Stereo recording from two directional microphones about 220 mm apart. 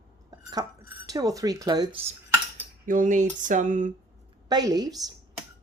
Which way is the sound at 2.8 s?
35° right (ahead or behind).